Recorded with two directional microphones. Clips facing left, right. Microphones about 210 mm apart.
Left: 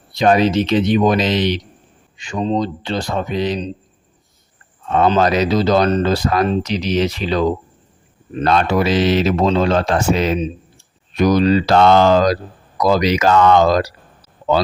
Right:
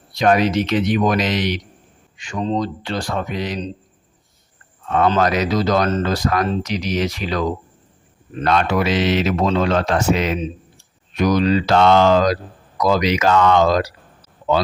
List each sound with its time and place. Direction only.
0.2 s speech: 30° left (ahead or behind)
4.9 s speech: 25° left (ahead or behind)